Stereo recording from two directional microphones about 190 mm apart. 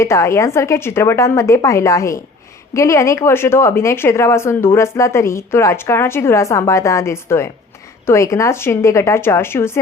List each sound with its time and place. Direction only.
0.0 s a woman's voice: 15° left (ahead or behind)